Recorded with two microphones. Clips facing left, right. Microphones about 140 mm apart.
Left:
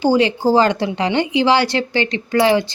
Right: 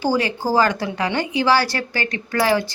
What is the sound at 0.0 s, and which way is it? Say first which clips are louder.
Speech: left 6 dB; 20° left (ahead or behind).